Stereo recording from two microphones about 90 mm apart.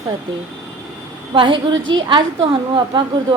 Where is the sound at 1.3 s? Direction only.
70° right (ahead or behind).